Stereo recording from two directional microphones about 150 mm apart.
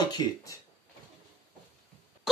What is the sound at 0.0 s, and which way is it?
Speech, 25° left (ahead or behind).